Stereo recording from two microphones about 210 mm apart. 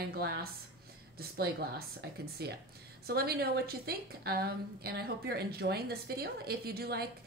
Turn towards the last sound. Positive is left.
turn(degrees=-50)  # may be behind; listen again after turning